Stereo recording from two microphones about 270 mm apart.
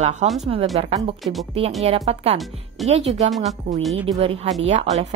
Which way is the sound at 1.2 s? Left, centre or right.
Centre.